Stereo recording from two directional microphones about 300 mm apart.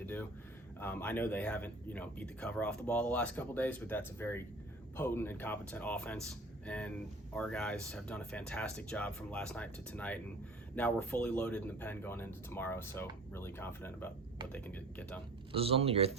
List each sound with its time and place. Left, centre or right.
0.0 s a sound: centre
0.8 s speech: centre
15.5 s speech: centre